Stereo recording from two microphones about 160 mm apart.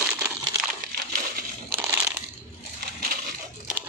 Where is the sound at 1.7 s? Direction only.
15° right (ahead or behind).